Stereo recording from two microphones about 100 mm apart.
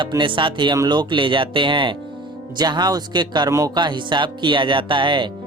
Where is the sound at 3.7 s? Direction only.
50° right (ahead or behind).